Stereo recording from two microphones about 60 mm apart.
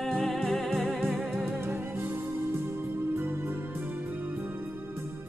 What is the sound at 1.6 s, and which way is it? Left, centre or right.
Music, right.